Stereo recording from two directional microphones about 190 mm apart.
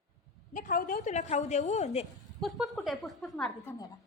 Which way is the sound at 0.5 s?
45° left (ahead or behind).